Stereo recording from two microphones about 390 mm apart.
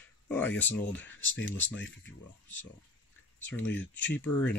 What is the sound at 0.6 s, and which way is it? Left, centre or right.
Speech, centre.